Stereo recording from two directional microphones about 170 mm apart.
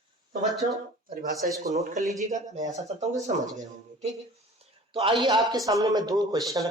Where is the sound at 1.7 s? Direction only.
40° right (ahead or behind).